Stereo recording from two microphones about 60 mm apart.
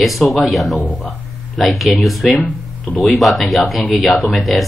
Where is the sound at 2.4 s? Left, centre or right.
Left.